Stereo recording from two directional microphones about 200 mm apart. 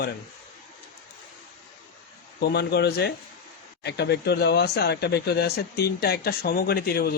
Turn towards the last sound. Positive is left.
turn(degrees=50)  # may be behind; listen again after turning